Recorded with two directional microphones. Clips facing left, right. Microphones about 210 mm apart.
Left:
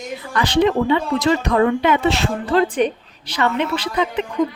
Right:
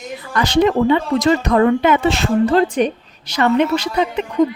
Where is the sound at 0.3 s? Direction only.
40° right (ahead or behind).